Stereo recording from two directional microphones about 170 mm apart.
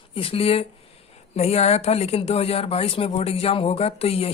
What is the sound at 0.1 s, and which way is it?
Speech, 35° left (ahead or behind).